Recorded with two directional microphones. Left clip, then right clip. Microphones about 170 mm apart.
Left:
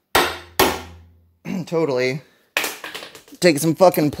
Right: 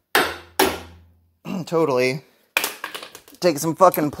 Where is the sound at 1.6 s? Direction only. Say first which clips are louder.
Right 1 dB; 15° right (ahead or behind).